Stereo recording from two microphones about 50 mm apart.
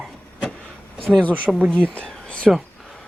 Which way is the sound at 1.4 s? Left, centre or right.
Right.